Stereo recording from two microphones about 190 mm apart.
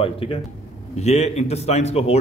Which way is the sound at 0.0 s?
30° left (ahead or behind).